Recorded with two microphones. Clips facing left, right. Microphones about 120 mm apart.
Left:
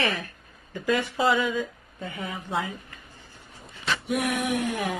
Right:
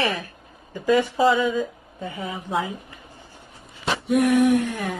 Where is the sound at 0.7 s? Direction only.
15° right (ahead or behind).